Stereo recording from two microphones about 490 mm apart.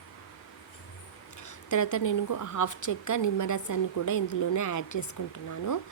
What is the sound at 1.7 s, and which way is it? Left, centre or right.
Speech, left.